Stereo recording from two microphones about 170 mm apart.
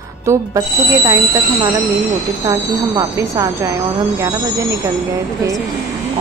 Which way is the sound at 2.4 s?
20° right (ahead or behind).